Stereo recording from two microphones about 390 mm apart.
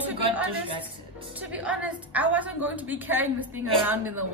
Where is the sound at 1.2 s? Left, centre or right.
Centre.